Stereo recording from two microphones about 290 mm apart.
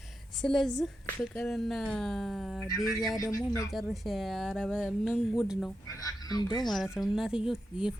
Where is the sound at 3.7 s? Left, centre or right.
Centre.